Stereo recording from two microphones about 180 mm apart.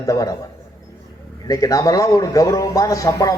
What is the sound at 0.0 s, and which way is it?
Speech, 20° left (ahead or behind).